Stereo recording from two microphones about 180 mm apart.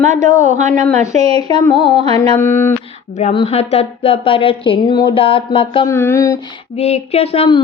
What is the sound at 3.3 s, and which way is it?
A woman's voice, 35° left (ahead or behind).